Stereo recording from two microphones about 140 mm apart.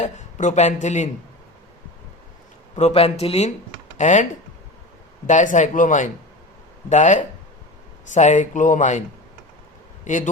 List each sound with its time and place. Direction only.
0.0 s a man's voice: 60° left (ahead or behind)
2.7 s a man's voice: 50° left (ahead or behind); by 10.2 s 65° left (ahead or behind)